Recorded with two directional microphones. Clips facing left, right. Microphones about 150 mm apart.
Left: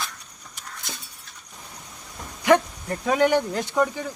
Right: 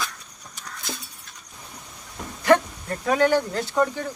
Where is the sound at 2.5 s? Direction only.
15° left (ahead or behind).